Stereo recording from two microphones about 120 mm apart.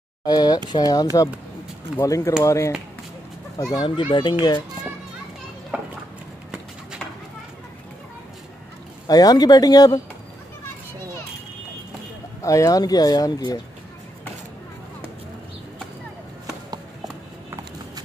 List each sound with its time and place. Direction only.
0.2 s speech: 35° left (ahead or behind)
5.7 s a sound: 10° right (ahead or behind)
9.0 s speech: 30° left (ahead or behind)
12.4 s speech: 25° left (ahead or behind)